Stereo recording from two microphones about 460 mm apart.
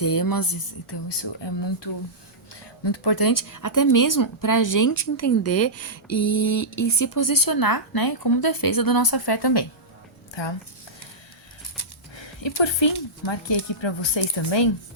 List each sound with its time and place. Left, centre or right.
0.0 s speech: left
11.8 s speech: left